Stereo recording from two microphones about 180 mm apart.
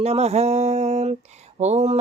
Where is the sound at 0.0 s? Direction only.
35° right (ahead or behind).